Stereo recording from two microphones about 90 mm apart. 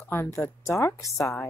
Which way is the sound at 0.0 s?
25° left (ahead or behind).